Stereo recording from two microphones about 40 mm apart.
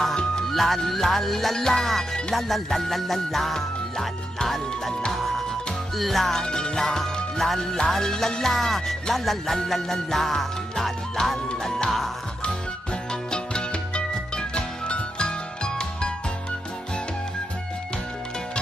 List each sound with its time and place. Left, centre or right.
0.1 s music: centre
0.5 s music: centre
5.9 s music: centre
6.4 s music: centre
13.1 s music: left